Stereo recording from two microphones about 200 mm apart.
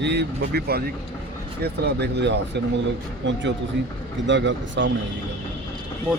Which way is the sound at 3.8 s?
60° right (ahead or behind).